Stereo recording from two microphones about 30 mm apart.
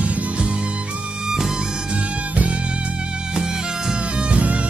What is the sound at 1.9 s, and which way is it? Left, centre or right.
Music, right.